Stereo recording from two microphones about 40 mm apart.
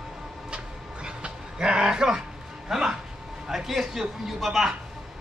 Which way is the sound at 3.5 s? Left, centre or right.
Centre.